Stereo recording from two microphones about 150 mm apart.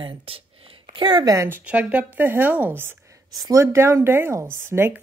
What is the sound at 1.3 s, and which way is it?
Speech, 15° right (ahead or behind).